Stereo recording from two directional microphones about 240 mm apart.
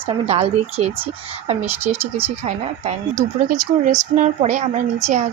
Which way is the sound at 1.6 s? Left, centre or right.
Centre.